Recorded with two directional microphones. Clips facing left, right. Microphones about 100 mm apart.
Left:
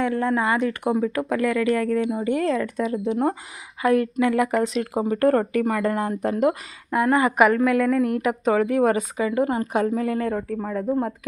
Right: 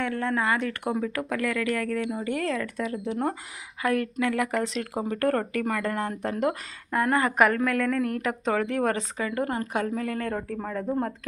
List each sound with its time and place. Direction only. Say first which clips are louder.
0.0 s speech: left 5 dB; 15° left (ahead or behind)
10.3 s speech: left 4 dB; 5° left (ahead or behind)